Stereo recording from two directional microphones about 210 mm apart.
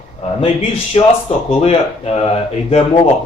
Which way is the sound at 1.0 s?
30° left (ahead or behind).